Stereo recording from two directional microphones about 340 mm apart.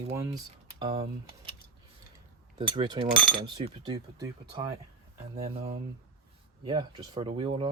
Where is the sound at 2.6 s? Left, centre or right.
Centre.